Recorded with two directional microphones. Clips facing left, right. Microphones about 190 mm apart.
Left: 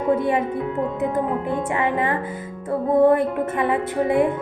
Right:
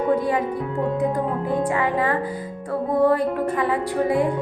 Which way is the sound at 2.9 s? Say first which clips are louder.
Left 3 dB; 25° left (ahead or behind).